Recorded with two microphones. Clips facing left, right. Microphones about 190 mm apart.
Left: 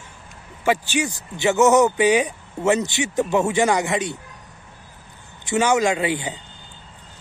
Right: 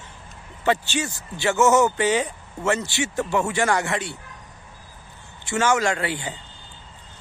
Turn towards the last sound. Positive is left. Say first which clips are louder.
# left 4 dB
turn(degrees=15)  # may be behind; listen again after turning